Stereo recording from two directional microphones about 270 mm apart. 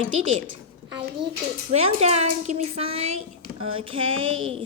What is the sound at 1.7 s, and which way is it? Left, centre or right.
A woman's voice, right.